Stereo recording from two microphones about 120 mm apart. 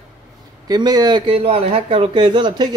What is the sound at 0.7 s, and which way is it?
Speech, 35° right (ahead or behind).